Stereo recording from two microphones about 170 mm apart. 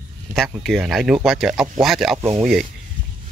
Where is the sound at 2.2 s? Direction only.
20° right (ahead or behind).